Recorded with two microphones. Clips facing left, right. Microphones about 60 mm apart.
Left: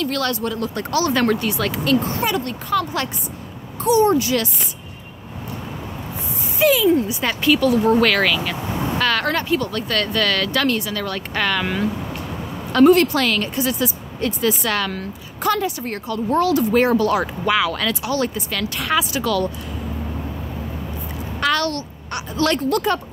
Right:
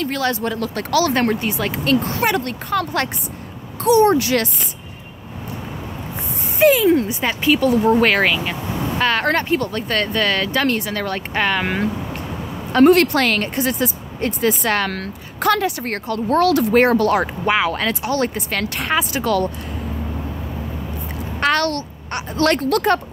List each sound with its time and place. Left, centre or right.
0.1 s speech: right
0.6 s speech: right
1.1 s speech: right
2.0 s speech: right
3.8 s speech: right
6.6 s speech: right
7.2 s speech: centre
11.6 s speech: right
12.8 s speech: right
14.9 s speech: right
16.7 s speech: right
21.4 s a child's voice: right
22.6 s speech: right